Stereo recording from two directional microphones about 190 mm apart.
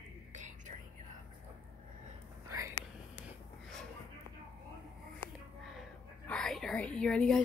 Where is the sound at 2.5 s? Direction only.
15° right (ahead or behind).